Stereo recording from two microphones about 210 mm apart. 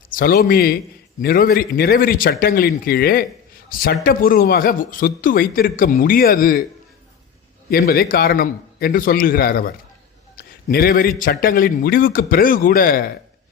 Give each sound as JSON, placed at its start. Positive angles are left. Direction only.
{"t": 0.1, "sound": "a man's voice", "side_deg": 45}
{"t": 7.7, "sound": "a man's voice", "side_deg": 45}
{"t": 10.3, "sound": "a sound", "side_deg": 45}
{"t": 11.2, "sound": "a man's voice", "side_deg": 40}